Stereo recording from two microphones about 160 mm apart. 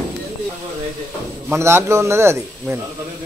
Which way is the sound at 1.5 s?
15° right (ahead or behind).